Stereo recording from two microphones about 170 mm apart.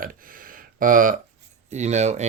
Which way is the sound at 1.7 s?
40° right (ahead or behind).